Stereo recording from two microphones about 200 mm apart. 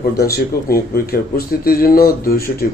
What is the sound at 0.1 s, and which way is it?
Speech, 50° left (ahead or behind).